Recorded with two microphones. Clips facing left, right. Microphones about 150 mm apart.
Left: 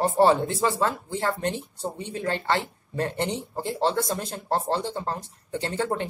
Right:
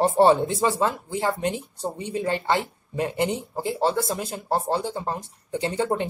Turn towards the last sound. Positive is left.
turn(degrees=-15)  # may be behind; listen again after turning